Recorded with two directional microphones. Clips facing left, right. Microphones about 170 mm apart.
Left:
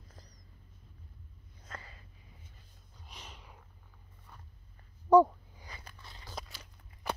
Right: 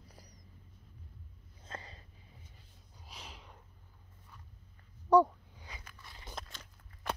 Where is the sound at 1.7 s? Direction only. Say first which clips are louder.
Right 2 dB; 25° right (ahead or behind).